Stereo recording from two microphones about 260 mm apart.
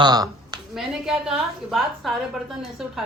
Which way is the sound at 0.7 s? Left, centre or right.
Centre.